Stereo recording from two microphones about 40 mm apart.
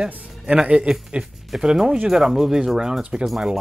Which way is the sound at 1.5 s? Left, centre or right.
Centre.